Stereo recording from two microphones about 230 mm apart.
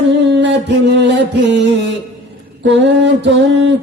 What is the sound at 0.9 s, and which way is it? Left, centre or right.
Speech, right.